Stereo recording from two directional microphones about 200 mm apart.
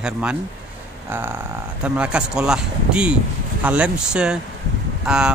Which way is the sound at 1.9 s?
5° right (ahead or behind).